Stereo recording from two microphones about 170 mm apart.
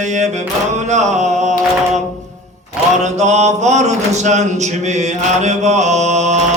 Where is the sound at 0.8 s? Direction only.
45° right (ahead or behind).